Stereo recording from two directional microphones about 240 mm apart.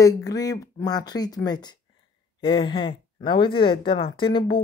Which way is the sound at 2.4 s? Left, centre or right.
Left.